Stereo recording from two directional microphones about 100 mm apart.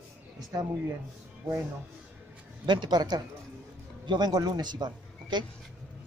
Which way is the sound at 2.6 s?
50° right (ahead or behind).